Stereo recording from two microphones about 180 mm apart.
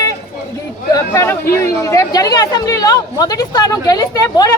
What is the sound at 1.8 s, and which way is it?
Speech, 20° left (ahead or behind).